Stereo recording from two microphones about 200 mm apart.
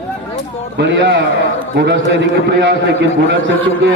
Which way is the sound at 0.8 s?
60° right (ahead or behind).